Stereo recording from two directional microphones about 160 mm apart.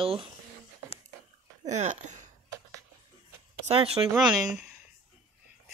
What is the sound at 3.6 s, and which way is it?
Speech, 40° right (ahead or behind).